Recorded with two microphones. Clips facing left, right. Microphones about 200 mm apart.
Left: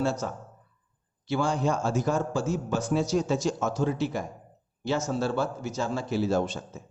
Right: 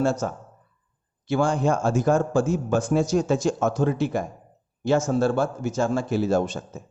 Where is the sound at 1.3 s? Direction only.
50° right (ahead or behind).